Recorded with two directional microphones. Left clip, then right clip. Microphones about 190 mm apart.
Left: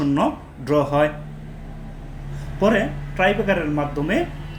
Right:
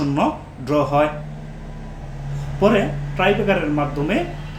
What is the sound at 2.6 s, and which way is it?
Speech, 20° left (ahead or behind).